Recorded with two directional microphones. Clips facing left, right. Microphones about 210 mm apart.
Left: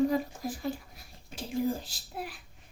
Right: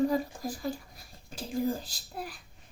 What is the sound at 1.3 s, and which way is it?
Speech, centre (ahead or behind).